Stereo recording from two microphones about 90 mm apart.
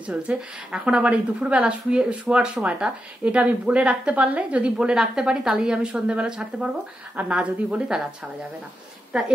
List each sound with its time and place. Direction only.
0.0 s a woman's voice: 10° right (ahead or behind)